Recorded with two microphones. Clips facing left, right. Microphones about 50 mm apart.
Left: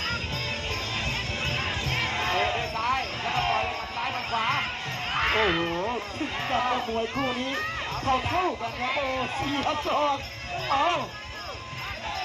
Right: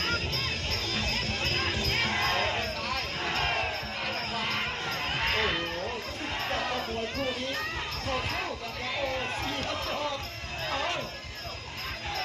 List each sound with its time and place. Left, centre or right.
0.7 s jingle bell: left
4.3 s basketball bounce: left
5.1 s a sound: left
6.5 s speech: left